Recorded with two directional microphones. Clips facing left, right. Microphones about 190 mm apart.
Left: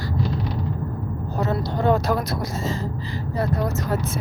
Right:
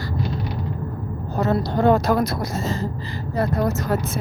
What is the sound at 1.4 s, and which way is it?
Speech, 50° right (ahead or behind).